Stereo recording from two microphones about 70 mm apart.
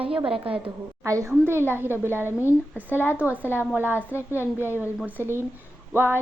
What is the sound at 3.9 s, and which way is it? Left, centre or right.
Speech, left.